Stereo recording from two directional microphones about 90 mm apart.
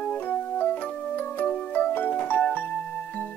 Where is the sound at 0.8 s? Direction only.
20° left (ahead or behind).